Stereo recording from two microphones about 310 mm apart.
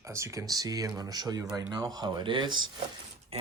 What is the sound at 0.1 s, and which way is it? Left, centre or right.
Speech, centre.